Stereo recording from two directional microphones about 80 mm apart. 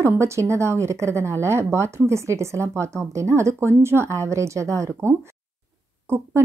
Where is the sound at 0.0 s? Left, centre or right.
Right.